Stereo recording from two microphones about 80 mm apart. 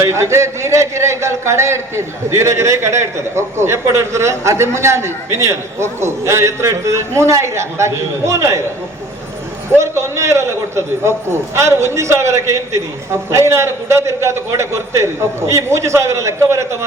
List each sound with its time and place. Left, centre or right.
0.0 s speech: right
9.6 s speech: right